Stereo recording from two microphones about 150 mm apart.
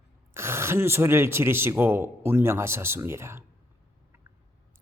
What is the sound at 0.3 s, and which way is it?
Speech, 15° right (ahead or behind).